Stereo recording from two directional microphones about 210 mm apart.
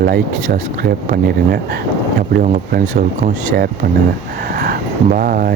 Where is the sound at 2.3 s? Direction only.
45° right (ahead or behind).